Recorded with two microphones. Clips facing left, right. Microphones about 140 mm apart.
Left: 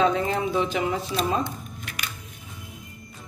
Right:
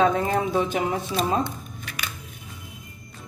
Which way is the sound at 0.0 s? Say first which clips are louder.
Right 1 dB; 50° right (ahead or behind).